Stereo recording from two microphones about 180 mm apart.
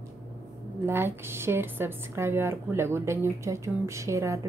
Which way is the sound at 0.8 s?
15° right (ahead or behind).